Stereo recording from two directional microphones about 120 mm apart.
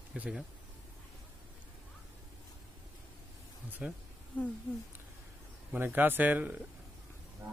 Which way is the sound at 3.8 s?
10° right (ahead or behind).